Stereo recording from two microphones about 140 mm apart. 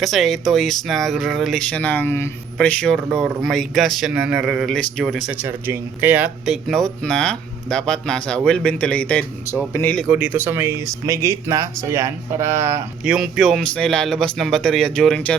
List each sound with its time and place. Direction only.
0.0 s speech: centre (ahead or behind); by 2.3 s 15° left (ahead or behind)
2.6 s speech: 5° left (ahead or behind)
10.1 s speech: 10° right (ahead or behind)
13.1 s speech: 5° right (ahead or behind)